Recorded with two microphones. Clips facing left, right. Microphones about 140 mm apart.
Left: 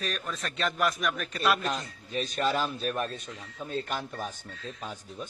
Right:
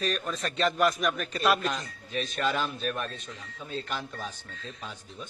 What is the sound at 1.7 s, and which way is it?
A man's voice, 35° left (ahead or behind).